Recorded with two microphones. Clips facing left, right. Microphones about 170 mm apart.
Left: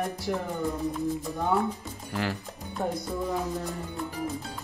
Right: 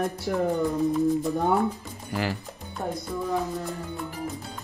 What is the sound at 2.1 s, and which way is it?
Speech, 5° right (ahead or behind).